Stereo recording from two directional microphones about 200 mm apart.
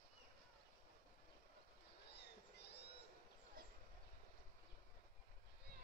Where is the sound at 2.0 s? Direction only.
55° left (ahead or behind).